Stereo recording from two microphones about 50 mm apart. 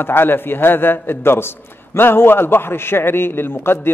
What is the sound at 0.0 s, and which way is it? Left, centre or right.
A man's voice, left.